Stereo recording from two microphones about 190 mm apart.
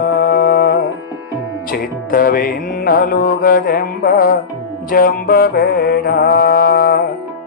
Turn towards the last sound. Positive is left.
turn(degrees=55)  # may be behind; listen again after turning